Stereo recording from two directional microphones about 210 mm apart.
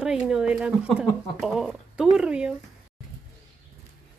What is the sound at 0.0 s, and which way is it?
Speech, 5° right (ahead or behind).